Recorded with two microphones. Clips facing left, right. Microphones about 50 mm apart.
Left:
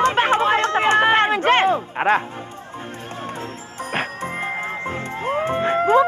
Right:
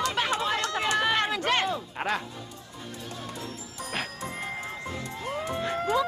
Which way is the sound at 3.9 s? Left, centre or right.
Left.